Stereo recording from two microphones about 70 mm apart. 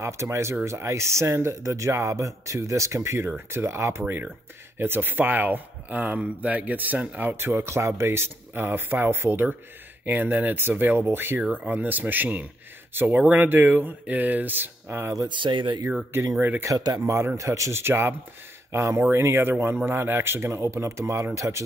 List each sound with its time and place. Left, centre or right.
0.0 s speech: right
11.6 s speech: right
15.2 s speech: right
16.3 s speech: right
16.7 s speech: right
17.0 s speech: right